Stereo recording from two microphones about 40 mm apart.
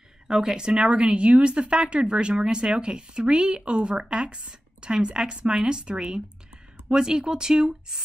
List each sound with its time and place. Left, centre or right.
0.3 s speech: centre